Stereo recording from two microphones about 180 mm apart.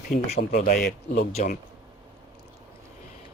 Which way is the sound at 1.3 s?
40° left (ahead or behind).